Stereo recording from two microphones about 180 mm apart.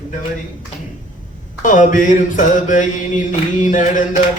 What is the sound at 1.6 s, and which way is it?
Mantra, 45° left (ahead or behind).